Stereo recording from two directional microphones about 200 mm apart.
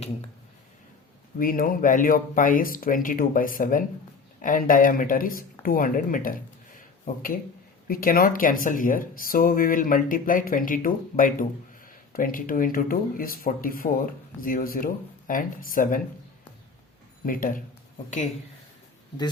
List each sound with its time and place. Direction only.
1.4 s speech: 45° left (ahead or behind)
6.7 s a sound: 45° left (ahead or behind)
7.9 s speech: 45° left (ahead or behind)
17.2 s speech: 45° left (ahead or behind)